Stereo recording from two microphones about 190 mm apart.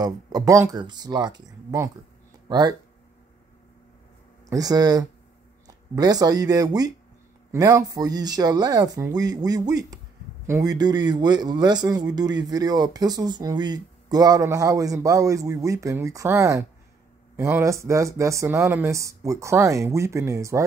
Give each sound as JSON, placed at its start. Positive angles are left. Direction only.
{"t": 0.0, "sound": "a man's voice", "side_deg": -20}
{"t": 4.5, "sound": "a man's voice", "side_deg": -20}